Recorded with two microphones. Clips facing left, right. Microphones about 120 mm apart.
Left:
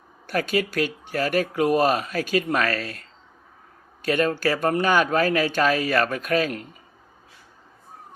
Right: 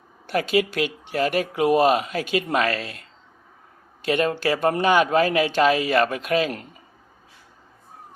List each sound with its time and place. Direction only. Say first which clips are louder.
0.3 s speech: right 2 dB; 25° right (ahead or behind)
4.0 s speech: even; 25° right (ahead or behind)